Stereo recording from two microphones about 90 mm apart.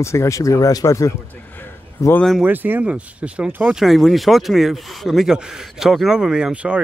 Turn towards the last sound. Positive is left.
turn(degrees=-10)  # may be behind; listen again after turning